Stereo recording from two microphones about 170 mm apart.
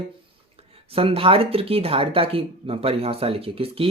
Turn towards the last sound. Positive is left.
turn(degrees=-35)  # may be behind; listen again after turning